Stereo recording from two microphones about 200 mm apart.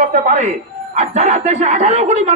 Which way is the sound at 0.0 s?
40° right (ahead or behind).